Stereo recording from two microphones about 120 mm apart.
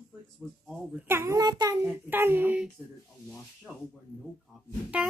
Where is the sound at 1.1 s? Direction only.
25° right (ahead or behind).